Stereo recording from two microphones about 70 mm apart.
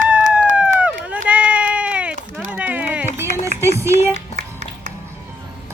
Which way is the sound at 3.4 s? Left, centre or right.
Right.